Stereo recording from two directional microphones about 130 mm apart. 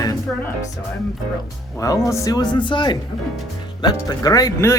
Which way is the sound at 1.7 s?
25° left (ahead or behind).